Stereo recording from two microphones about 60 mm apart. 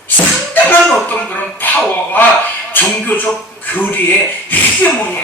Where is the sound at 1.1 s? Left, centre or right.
Left.